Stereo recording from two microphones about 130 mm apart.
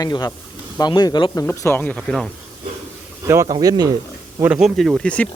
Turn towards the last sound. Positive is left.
turn(degrees=5)  # may be behind; listen again after turning